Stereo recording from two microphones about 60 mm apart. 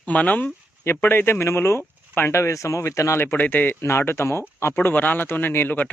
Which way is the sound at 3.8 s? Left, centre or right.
Left.